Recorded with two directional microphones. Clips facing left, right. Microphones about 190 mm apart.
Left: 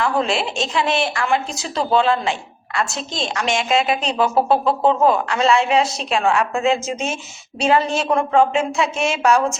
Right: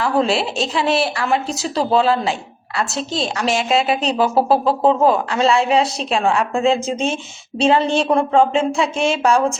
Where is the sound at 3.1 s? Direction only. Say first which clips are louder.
Right 2 dB; 35° right (ahead or behind).